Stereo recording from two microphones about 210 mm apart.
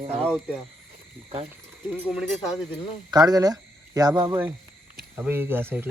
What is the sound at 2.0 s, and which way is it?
Speech, 5° right (ahead or behind).